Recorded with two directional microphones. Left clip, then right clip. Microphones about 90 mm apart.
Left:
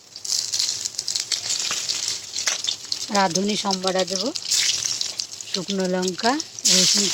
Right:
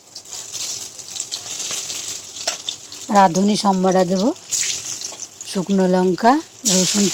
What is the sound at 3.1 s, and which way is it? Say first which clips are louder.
Speech: right 7 dB; 30° right (ahead or behind).